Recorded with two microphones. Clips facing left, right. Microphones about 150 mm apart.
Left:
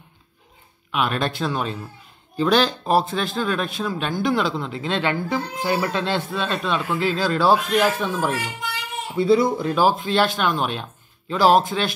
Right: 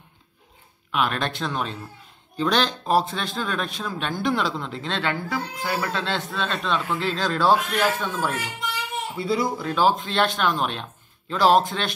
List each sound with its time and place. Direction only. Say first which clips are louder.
0.9 s speech: left 2 dB; 5° left (ahead or behind)
9.1 s speech: left 8 dB; 25° left (ahead or behind)
9.8 s speech: left 1 dB; 5° left (ahead or behind)